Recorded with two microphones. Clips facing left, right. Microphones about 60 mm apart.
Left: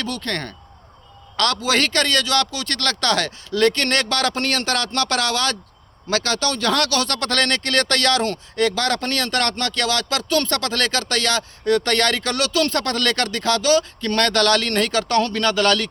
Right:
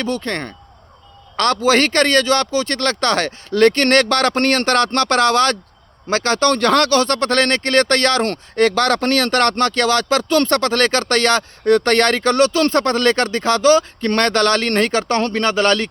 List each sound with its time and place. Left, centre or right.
0.0 s speech: right